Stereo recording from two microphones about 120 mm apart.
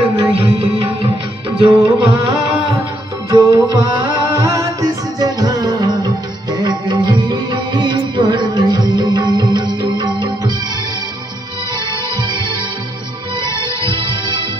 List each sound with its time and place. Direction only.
0.2 s music: 50° right (ahead or behind)
3.3 s music: 30° right (ahead or behind)
13.5 s music: 40° right (ahead or behind)